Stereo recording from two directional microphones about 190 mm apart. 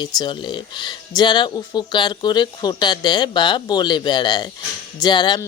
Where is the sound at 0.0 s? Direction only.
25° left (ahead or behind).